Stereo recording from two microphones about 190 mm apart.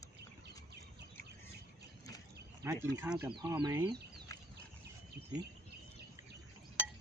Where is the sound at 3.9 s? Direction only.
60° right (ahead or behind).